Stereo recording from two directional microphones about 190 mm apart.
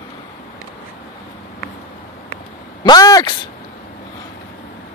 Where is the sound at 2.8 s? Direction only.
20° left (ahead or behind).